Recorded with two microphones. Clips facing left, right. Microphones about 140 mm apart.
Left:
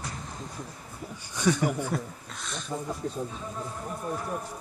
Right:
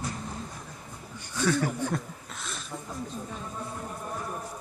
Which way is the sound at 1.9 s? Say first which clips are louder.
Left 1 dB; centre (ahead or behind).